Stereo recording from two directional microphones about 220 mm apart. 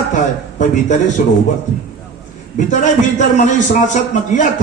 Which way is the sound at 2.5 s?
35° left (ahead or behind).